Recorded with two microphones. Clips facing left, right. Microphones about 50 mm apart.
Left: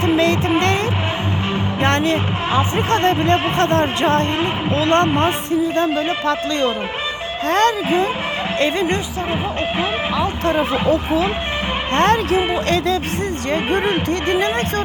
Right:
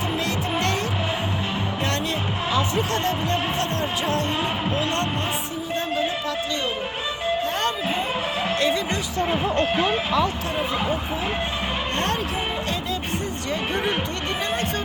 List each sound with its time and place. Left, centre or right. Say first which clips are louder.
0.0 s music: left 9 dB; left
1.8 s a sound: left 11 dB; left
2.6 s speech: left 7 dB; left
7.4 s speech: left 8 dB; left
8.5 s speech: left 6 dB; left
10.5 s speech: left 7 dB; left
11.9 s speech: left 13 dB; left
13.5 s speech: left 6 dB; left